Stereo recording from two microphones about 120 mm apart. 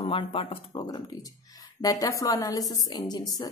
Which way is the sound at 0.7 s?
30° left (ahead or behind).